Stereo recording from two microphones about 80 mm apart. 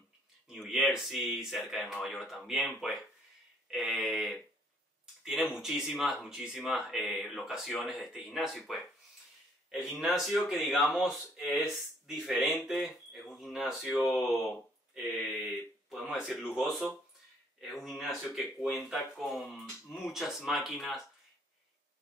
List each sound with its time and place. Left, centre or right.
0.5 s speech: centre
11.5 s speech: left
12.1 s speech: centre
17.8 s speech: centre